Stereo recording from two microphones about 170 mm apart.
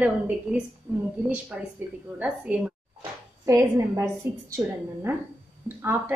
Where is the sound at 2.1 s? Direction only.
10° right (ahead or behind).